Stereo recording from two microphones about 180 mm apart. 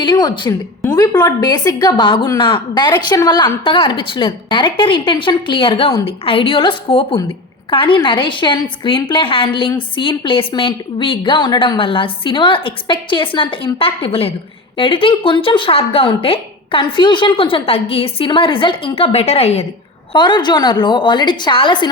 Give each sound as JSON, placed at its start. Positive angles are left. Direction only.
{"t": 0.0, "sound": "a woman's voice", "side_deg": 25}
{"t": 20.1, "sound": "a woman's voice", "side_deg": 25}